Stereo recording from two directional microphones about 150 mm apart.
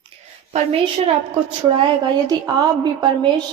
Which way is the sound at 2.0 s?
25° right (ahead or behind).